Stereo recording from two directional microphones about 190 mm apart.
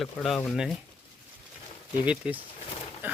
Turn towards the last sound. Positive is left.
turn(degrees=-10)  # may be behind; listen again after turning